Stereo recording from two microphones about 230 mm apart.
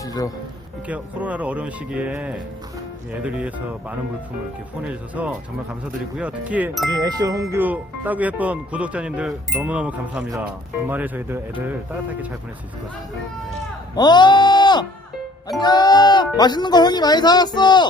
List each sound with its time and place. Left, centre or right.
0.0 s music: centre
0.9 s speech: centre
13.9 s music: centre
15.6 s speech: centre